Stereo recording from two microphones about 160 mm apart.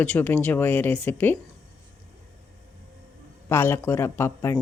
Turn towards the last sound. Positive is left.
turn(degrees=15)  # may be behind; listen again after turning